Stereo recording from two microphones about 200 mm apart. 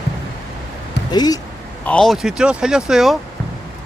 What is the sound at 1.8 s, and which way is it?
Speech, 5° left (ahead or behind).